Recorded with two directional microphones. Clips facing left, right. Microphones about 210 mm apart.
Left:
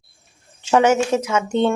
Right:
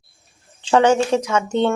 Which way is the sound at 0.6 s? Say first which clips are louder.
Right 1 dB; 10° left (ahead or behind).